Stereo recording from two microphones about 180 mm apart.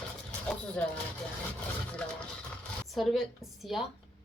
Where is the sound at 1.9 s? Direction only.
5° left (ahead or behind).